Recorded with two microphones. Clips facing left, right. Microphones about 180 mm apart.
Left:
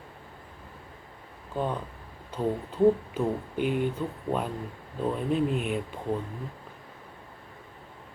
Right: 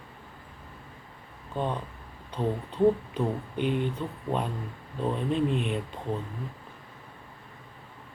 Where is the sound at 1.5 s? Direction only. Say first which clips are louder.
Left 1 dB; 5° left (ahead or behind).